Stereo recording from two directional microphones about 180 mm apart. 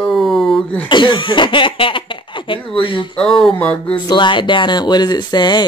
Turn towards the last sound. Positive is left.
turn(degrees=25)  # may be behind; listen again after turning